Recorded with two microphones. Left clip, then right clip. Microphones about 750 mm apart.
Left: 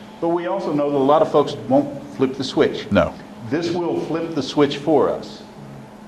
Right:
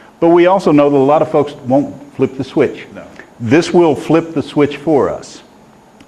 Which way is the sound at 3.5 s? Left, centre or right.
Right.